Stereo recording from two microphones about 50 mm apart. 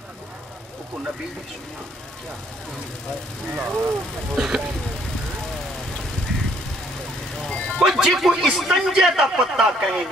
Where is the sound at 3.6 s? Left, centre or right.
Right.